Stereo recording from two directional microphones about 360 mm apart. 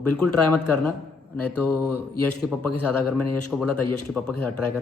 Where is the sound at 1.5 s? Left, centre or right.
Left.